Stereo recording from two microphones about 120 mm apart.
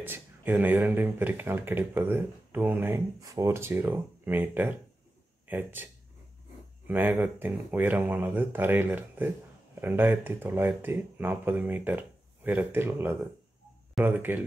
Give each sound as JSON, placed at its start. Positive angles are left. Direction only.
{"t": 0.0, "sound": "speech", "side_deg": -15}
{"t": 3.2, "sound": "speech", "side_deg": -25}
{"t": 6.9, "sound": "speech", "side_deg": -15}